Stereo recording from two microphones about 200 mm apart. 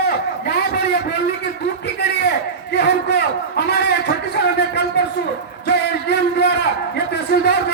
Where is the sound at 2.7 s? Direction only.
55° left (ahead or behind).